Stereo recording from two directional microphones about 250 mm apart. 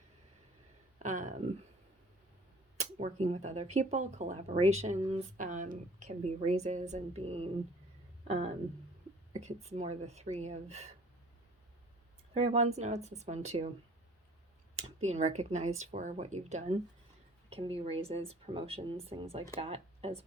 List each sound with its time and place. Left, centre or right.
0.9 s a sound: right
2.7 s speech: right
12.4 s speech: right
14.8 s speech: right